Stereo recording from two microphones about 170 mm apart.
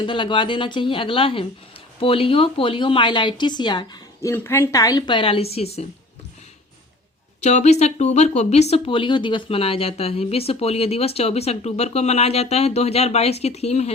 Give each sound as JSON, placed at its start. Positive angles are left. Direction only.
{"t": 0.0, "sound": "speech", "side_deg": 30}
{"t": 7.4, "sound": "speech", "side_deg": 40}